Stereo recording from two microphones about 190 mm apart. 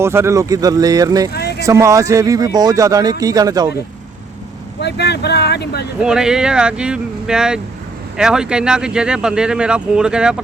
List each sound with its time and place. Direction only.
0.0 s speech: 15° right (ahead or behind)
1.3 s vehicle: 60° left (ahead or behind)
1.6 s speech: 15° right (ahead or behind)
4.8 s speech: 60° left (ahead or behind)
6.0 s speech: 5° right (ahead or behind)